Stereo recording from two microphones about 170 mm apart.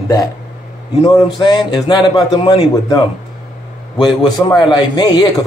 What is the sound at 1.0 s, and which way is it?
Speech, 25° left (ahead or behind).